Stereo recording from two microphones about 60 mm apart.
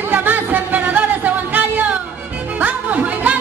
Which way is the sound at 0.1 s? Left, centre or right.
Right.